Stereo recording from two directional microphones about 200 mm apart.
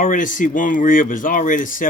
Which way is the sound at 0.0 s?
40° left (ahead or behind).